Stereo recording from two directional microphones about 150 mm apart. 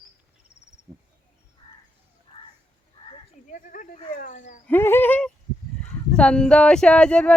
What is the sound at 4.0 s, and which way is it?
Speech, 55° left (ahead or behind).